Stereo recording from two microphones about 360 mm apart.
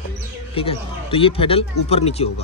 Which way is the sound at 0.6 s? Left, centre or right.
Centre.